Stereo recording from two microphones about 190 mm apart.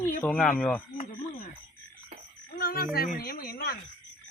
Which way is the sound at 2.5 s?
50° left (ahead or behind).